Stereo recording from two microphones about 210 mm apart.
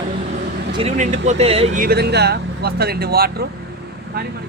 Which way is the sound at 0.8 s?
30° right (ahead or behind).